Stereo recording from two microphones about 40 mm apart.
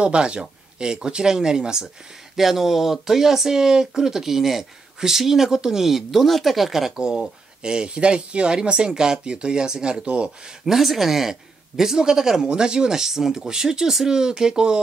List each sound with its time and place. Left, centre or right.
0.0 s speech: right
2.3 s speech: centre
7.0 s speech: centre
10.6 s speech: centre